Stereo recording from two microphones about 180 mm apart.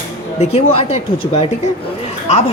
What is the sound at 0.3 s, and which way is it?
Speech, 35° left (ahead or behind).